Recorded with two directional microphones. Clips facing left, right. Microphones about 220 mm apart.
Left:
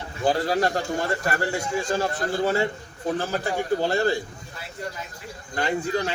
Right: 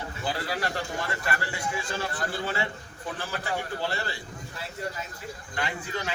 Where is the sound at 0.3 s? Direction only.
40° left (ahead or behind).